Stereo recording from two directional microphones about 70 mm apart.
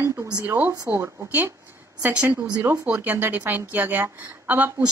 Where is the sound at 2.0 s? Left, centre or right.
Centre.